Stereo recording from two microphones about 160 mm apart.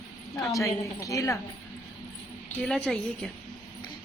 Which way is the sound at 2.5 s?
5° left (ahead or behind).